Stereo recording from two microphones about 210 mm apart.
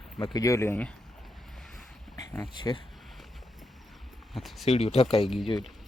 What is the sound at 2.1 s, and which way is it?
Speech, 20° left (ahead or behind).